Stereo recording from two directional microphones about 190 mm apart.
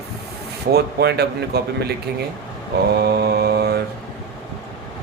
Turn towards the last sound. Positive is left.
turn(degrees=-60)  # may be behind; listen again after turning